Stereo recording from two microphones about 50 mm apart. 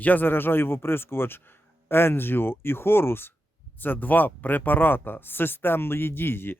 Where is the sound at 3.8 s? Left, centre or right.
Left.